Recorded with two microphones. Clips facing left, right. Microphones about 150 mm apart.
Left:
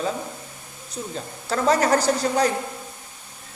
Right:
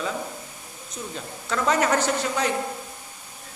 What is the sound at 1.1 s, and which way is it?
Speech, 35° left (ahead or behind).